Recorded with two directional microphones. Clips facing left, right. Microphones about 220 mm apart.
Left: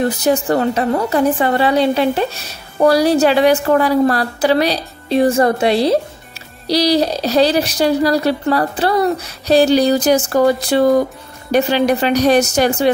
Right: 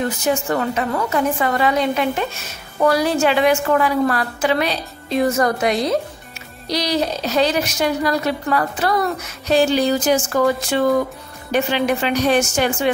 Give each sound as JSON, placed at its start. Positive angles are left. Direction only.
{"t": 0.0, "sound": "a woman's voice", "side_deg": 35}